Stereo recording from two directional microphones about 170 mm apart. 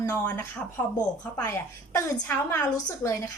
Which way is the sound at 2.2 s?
20° left (ahead or behind).